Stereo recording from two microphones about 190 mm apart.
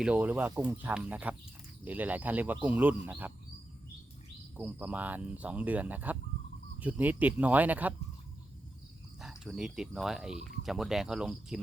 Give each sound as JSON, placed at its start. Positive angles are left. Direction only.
{"t": 0.0, "sound": "speech", "side_deg": -10}
{"t": 4.5, "sound": "speech", "side_deg": -5}
{"t": 9.2, "sound": "speech", "side_deg": 0}